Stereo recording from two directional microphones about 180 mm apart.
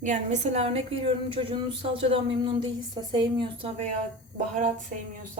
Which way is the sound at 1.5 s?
30° right (ahead or behind).